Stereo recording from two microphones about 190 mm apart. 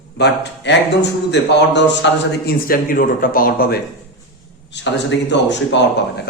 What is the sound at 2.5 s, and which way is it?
A man's voice, 50° left (ahead or behind).